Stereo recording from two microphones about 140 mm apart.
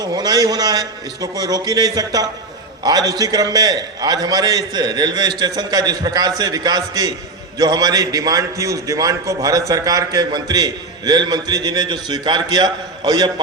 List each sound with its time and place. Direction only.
0.0 s a man's voice: 30° right (ahead or behind)